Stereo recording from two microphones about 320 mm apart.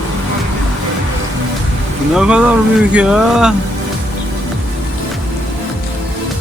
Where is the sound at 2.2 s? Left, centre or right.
Centre.